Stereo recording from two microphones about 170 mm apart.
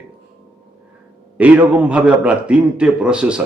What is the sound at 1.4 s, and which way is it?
A man's voice, 10° right (ahead or behind).